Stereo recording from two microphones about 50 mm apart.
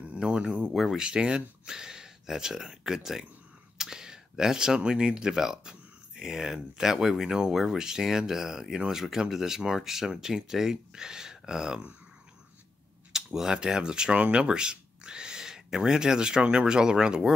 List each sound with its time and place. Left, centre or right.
0.2 s speech: centre
13.1 s speech: centre